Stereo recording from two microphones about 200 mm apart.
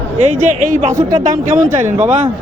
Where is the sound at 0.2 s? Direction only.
35° right (ahead or behind).